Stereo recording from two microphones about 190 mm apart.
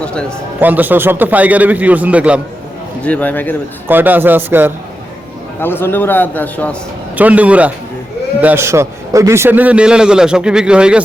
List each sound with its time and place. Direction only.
0.0 s a man's voice: 5° left (ahead or behind)
0.6 s a man's voice: 10° right (ahead or behind)
3.0 s a man's voice: 10° left (ahead or behind)
3.8 s a man's voice: 10° right (ahead or behind)
5.5 s a man's voice: 10° left (ahead or behind)
7.2 s a man's voice: 10° right (ahead or behind)